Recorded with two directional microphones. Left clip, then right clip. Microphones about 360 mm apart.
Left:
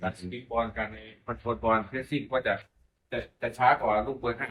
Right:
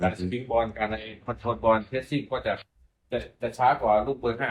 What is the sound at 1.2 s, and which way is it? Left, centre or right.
Speech, right.